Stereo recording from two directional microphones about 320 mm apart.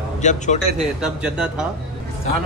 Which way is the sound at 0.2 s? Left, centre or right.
Left.